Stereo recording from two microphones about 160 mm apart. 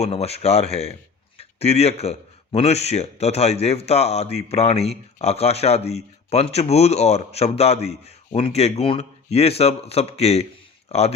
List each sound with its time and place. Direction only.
0.0 s speech: 40° left (ahead or behind)